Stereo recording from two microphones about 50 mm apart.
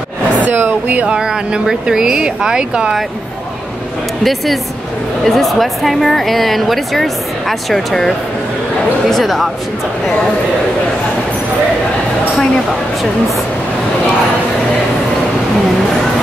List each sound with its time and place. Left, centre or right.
0.4 s speech: right
1.0 s speech: centre
4.2 s speech: centre
9.1 s speech: centre